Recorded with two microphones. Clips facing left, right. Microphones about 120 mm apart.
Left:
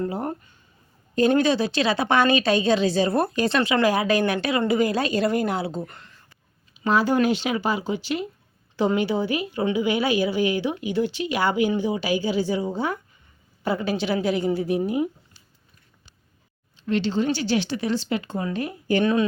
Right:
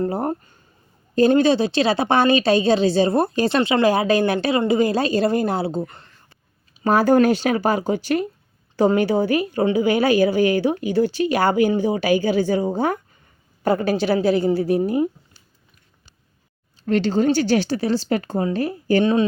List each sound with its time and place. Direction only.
0.0 s a woman's voice: 40° right (ahead or behind)
1.3 s a woman's voice: 30° right (ahead or behind)
6.7 s a woman's voice: 45° right (ahead or behind)
16.8 s a woman's voice: 45° right (ahead or behind)